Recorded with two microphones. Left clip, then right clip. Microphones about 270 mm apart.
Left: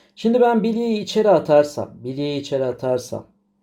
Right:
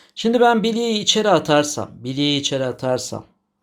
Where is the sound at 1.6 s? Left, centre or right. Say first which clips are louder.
Even; right.